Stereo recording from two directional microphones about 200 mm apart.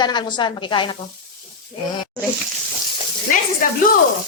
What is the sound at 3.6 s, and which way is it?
Speech, 45° left (ahead or behind).